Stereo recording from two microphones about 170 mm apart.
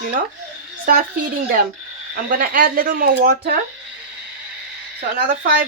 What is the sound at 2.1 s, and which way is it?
Speech, 55° right (ahead or behind).